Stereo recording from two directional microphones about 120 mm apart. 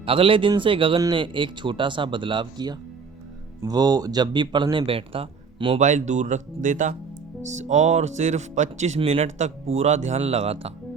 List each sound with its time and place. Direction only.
0.0 s speech: 50° right (ahead or behind)
5.8 s speech: 80° right
7.5 s speech: 80° right
9.1 s speech: 70° right (ahead or behind)